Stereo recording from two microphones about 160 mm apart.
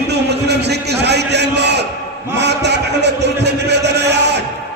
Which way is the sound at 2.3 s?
90° right.